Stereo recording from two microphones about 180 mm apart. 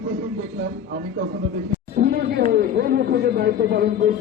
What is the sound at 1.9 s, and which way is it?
A man's voice, 60° right (ahead or behind).